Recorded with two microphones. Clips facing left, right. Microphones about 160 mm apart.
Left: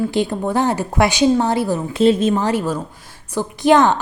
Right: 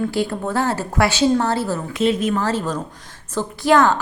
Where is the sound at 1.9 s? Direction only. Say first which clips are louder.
Left 5 dB; 30° left (ahead or behind).